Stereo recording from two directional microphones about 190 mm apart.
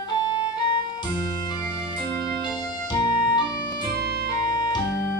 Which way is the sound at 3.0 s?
25° left (ahead or behind).